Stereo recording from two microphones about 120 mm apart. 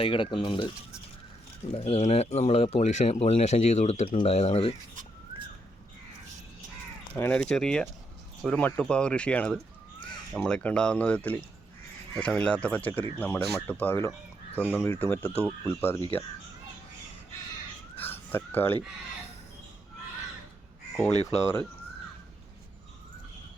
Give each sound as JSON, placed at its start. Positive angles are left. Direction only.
{"t": 0.0, "sound": "speech", "side_deg": 45}
{"t": 1.7, "sound": "speech", "side_deg": 55}
{"t": 7.2, "sound": "speech", "side_deg": 10}
{"t": 17.9, "sound": "a sound", "side_deg": 15}
{"t": 21.2, "sound": "speech", "side_deg": 20}